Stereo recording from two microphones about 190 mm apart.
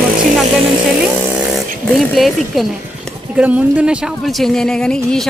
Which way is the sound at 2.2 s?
Centre (ahead or behind).